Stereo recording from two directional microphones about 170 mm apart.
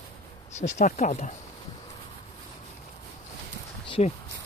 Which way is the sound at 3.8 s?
30° left (ahead or behind).